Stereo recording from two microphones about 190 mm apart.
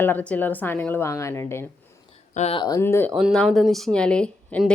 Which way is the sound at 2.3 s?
35° left (ahead or behind).